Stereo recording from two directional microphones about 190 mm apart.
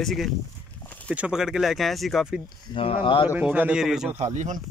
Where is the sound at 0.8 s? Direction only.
10° left (ahead or behind).